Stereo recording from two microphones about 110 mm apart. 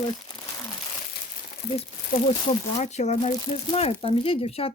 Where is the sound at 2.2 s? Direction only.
75° left (ahead or behind).